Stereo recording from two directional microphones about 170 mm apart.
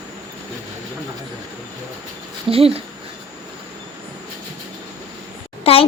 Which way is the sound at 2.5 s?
35° right (ahead or behind).